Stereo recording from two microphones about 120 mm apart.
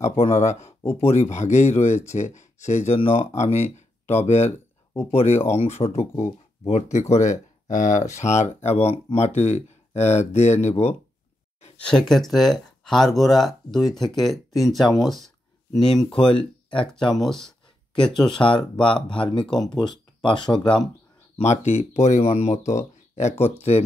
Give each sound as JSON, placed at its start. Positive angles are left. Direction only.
{"t": 0.0, "sound": "speech", "side_deg": 60}
{"t": 3.0, "sound": "speech", "side_deg": 55}
{"t": 7.7, "sound": "speech", "side_deg": 90}
{"t": 8.6, "sound": "speech", "side_deg": 60}
{"t": 11.8, "sound": "speech", "side_deg": 5}
{"t": 16.3, "sound": "speech", "side_deg": 45}
{"t": 17.2, "sound": "a sound", "side_deg": 5}
{"t": 18.2, "sound": "speech", "side_deg": 45}
{"t": 21.4, "sound": "speech", "side_deg": 70}